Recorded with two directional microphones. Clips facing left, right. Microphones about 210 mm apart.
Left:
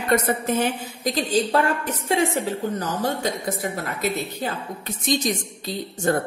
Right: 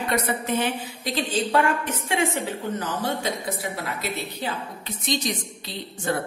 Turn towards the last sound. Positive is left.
turn(degrees=45)  # may be behind; listen again after turning